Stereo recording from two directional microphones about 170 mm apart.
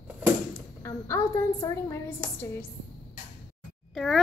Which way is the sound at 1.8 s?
15° left (ahead or behind).